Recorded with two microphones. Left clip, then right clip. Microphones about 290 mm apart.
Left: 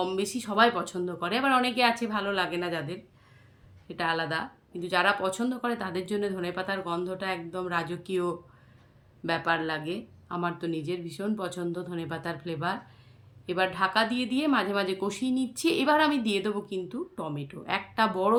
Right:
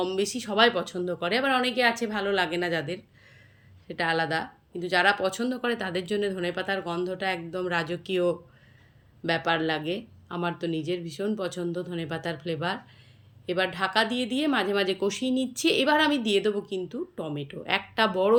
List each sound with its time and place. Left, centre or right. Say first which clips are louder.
0.0 s speech: right 2 dB; centre